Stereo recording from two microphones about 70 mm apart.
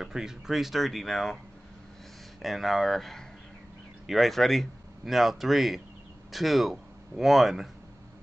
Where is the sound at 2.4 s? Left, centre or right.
Centre.